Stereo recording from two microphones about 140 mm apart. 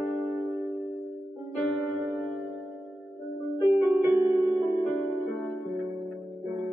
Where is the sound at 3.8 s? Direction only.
5° right (ahead or behind).